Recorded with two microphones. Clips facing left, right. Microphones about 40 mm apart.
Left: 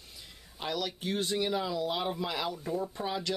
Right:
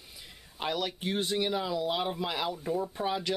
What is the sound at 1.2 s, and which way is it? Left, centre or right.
Speech, centre.